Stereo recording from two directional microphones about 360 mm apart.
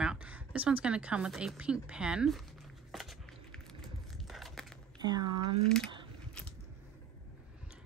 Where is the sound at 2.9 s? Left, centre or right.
Centre.